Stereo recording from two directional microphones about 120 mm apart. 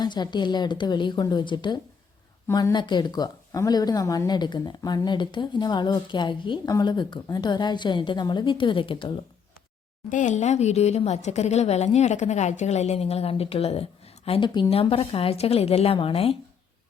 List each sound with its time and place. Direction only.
0.0 s a woman's voice: 40° left (ahead or behind)
10.1 s a woman's voice: 90° left; by 14.7 s 40° left (ahead or behind)
14.7 s a woman's voice: 50° left (ahead or behind)